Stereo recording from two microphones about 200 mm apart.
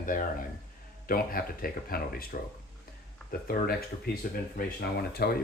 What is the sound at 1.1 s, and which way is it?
Speech, 45° left (ahead or behind).